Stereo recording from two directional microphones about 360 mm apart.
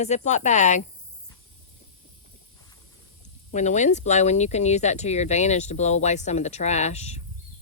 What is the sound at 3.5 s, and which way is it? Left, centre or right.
Speech, centre.